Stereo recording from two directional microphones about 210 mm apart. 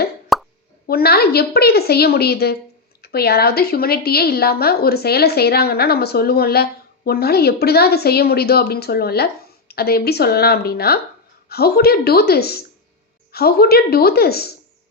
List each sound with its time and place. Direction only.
0.3 s plop: centre (ahead or behind)
0.9 s speech: 45° left (ahead or behind)